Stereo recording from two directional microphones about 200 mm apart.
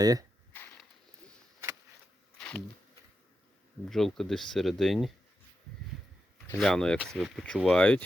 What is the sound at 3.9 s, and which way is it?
Speech, centre (ahead or behind).